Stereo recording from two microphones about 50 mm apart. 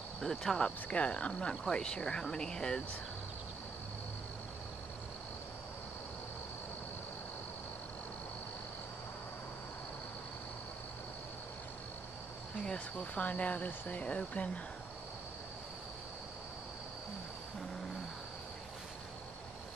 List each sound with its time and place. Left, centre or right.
0.2 s speech: centre
0.7 s speech: left
12.6 s speech: left